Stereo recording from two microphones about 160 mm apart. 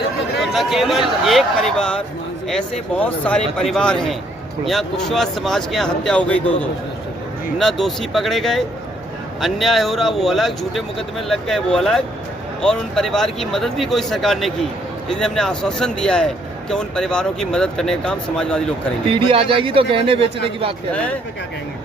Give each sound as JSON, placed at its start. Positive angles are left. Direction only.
{"t": 0.3, "sound": "speech", "side_deg": 0}
{"t": 19.1, "sound": "speech", "side_deg": -35}
{"t": 20.9, "sound": "speech", "side_deg": 10}